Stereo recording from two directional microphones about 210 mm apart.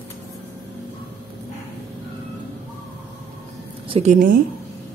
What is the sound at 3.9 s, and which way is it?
Speech, 30° right (ahead or behind).